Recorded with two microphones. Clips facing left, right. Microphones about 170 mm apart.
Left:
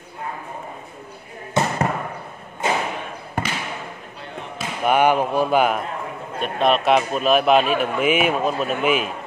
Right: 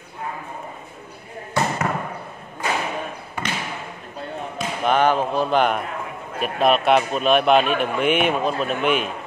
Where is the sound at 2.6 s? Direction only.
25° left (ahead or behind).